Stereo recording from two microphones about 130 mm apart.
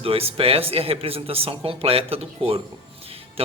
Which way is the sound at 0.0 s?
45° right (ahead or behind).